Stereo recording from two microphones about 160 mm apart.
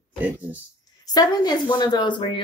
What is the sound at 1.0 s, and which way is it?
A woman's voice, 25° left (ahead or behind).